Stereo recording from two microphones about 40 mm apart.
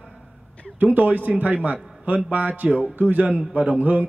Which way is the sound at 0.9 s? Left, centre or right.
Right.